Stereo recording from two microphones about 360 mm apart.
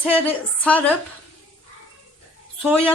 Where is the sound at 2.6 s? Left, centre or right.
Centre.